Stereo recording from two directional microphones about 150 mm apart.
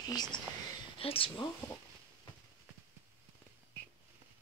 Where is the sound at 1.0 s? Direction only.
40° left (ahead or behind).